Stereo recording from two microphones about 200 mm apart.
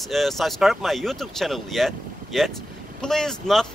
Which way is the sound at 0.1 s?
Centre (ahead or behind).